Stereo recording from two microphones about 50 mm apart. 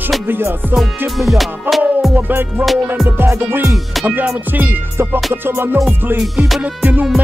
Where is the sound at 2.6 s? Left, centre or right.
Right.